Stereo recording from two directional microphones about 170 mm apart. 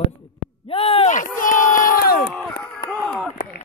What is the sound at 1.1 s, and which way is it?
Crowd, 50° left (ahead or behind).